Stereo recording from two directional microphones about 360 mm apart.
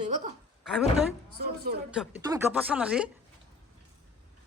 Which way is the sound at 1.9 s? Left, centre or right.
Centre.